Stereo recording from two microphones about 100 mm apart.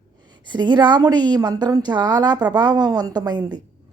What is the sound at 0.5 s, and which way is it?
Speech, 50° right (ahead or behind).